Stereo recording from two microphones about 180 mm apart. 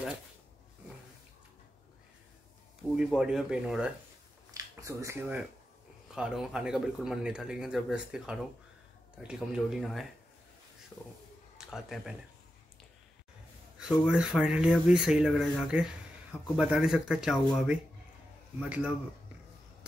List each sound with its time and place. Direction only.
3.0 s speech: 5° right (ahead or behind)
4.6 s speech: 15° right (ahead or behind)
6.1 s speech: 5° right (ahead or behind)
11.5 s a man's voice: centre (ahead or behind)
13.7 s speech: 5° right (ahead or behind)